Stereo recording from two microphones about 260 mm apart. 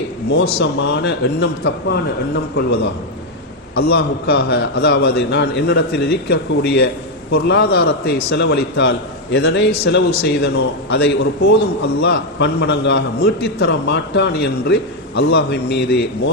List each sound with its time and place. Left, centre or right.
0.6 s a man's voice: left
3.8 s a man's voice: left